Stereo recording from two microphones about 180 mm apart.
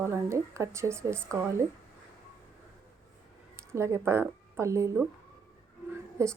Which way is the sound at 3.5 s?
15° right (ahead or behind).